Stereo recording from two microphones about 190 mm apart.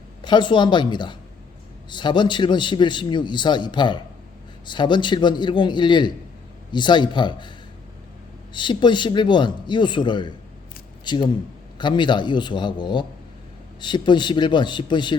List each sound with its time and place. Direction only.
0.2 s a man's voice: 25° left (ahead or behind)
8.5 s a man's voice: 25° left (ahead or behind)